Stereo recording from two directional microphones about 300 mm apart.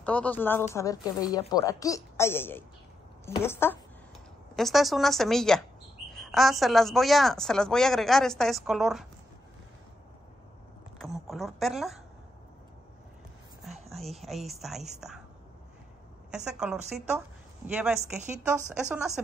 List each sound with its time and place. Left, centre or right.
0.0 s a woman's voice: centre
11.0 s speech: centre
13.7 s a woman's voice: centre
16.3 s a woman's voice: centre
18.5 s a woman's voice: centre